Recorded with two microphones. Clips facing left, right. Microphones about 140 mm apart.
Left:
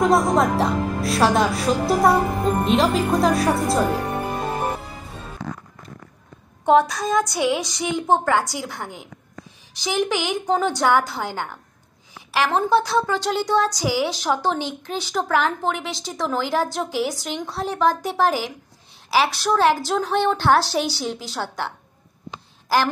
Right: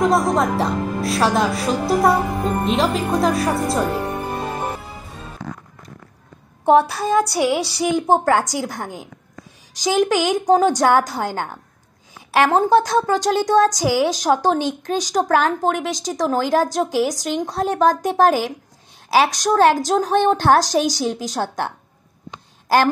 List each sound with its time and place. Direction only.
0.0 s a woman's voice: centre (ahead or behind)
6.6 s a woman's voice: 30° right (ahead or behind)
12.4 s speech: 45° right (ahead or behind)